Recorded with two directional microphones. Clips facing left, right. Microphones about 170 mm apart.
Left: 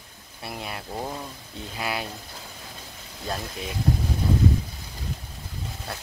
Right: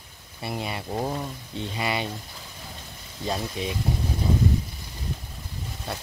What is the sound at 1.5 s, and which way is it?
Speech, centre (ahead or behind).